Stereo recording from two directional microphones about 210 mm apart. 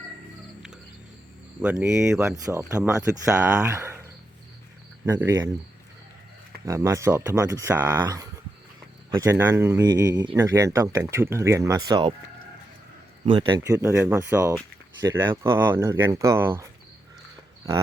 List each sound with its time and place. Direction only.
1.6 s speech: 5° right (ahead or behind)
2.3 s speech: 15° right (ahead or behind)
5.0 s speech: 15° right (ahead or behind)
6.7 s speech: 15° right (ahead or behind)
13.2 s a man's voice: 25° right (ahead or behind)